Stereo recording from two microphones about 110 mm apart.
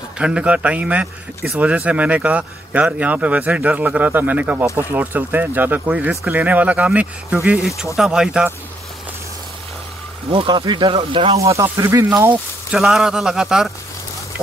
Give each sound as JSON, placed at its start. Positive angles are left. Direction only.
{"t": 0.2, "sound": "speech", "side_deg": -10}
{"t": 10.3, "sound": "speech", "side_deg": -45}
{"t": 11.5, "sound": "speech", "side_deg": -25}
{"t": 12.7, "sound": "speech", "side_deg": 0}